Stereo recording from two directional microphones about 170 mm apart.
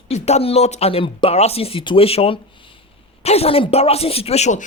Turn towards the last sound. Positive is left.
turn(degrees=40)  # may be behind; listen again after turning